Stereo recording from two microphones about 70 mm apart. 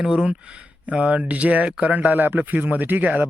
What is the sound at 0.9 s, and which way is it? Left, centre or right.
Speech, centre.